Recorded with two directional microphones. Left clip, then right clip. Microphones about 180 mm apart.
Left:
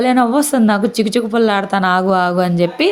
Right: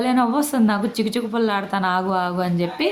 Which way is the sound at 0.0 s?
30° left (ahead or behind).